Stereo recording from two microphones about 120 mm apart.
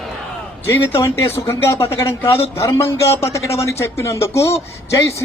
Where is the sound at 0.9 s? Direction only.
25° left (ahead or behind).